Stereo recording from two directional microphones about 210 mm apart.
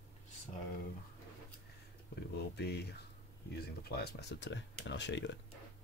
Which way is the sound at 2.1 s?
50° left (ahead or behind).